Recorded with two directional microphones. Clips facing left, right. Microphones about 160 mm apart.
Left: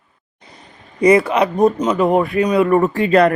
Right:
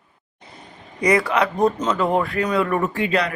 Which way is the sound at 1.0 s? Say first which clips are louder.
Left 6 dB; 25° left (ahead or behind).